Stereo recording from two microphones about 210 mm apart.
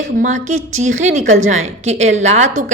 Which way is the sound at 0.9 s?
70° right (ahead or behind).